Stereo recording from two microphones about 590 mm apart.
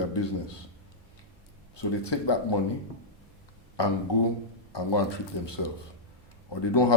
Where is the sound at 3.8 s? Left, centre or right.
Left.